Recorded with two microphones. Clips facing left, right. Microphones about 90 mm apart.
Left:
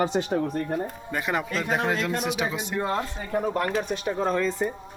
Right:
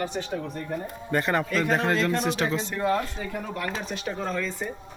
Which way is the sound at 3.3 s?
40° left (ahead or behind).